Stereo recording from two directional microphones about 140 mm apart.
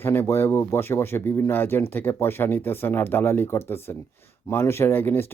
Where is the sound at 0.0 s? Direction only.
15° left (ahead or behind).